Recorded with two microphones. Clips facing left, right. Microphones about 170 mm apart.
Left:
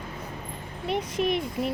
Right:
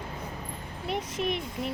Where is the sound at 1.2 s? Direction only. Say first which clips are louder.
Left 5 dB; 10° left (ahead or behind).